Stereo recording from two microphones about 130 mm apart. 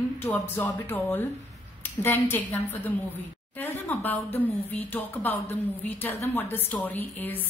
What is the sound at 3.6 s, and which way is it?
A woman's voice, 15° left (ahead or behind).